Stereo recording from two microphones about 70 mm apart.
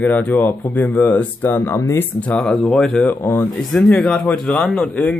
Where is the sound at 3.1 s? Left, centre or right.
Left.